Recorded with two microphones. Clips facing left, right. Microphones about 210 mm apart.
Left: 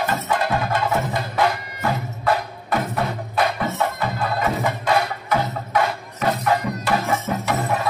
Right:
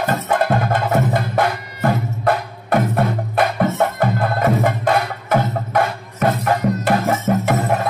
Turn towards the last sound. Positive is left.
turn(degrees=-60)  # may be behind; listen again after turning